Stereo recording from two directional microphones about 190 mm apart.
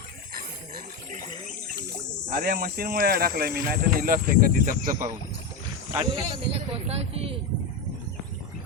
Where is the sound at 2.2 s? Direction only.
50° right (ahead or behind).